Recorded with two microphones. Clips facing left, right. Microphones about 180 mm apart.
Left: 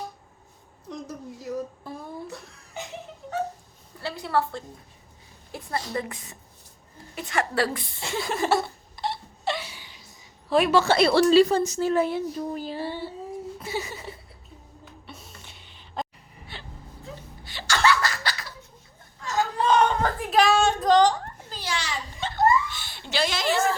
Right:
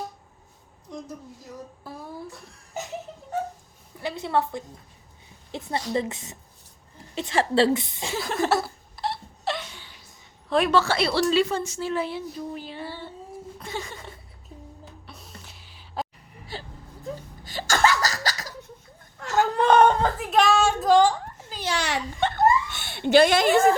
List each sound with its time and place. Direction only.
1.8 s a sound: 5° right (ahead or behind)
3.9 s a woman's voice: 20° right (ahead or behind)
8.1 s laughter: centre (ahead or behind)
10.5 s a woman's voice: centre (ahead or behind)
10.9 s a woman's voice: 50° left (ahead or behind)
11.3 s speech: 35° left (ahead or behind)
13.6 s a sound: 10° left (ahead or behind)
15.0 s music: centre (ahead or behind)
15.4 s a sound: centre (ahead or behind)
16.5 s vehicle: 35° right (ahead or behind)
17.4 s laughter: 45° right (ahead or behind)
19.2 s whimper: 65° right (ahead or behind)
20.1 s a sound: centre (ahead or behind)
21.8 s giggle: 65° right (ahead or behind)